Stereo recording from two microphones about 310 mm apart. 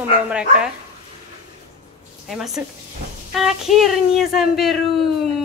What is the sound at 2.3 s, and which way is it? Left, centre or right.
Speech, centre.